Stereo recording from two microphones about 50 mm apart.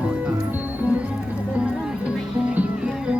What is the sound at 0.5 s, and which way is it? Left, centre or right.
Music, right.